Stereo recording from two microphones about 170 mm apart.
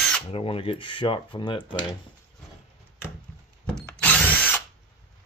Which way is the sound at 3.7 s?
5° left (ahead or behind).